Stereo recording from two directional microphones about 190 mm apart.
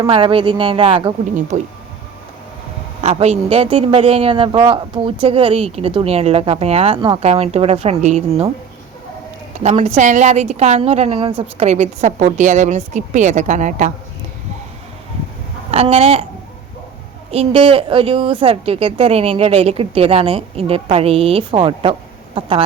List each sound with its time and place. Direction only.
0.1 s a woman's voice: 30° right (ahead or behind)
1.5 s a woman's voice: 40° right (ahead or behind)
3.0 s a woman's voice: 35° right (ahead or behind)
9.6 s a woman's voice: 35° right (ahead or behind)
15.7 s a woman's voice: 30° right (ahead or behind)
17.3 s a woman's voice: 30° right (ahead or behind)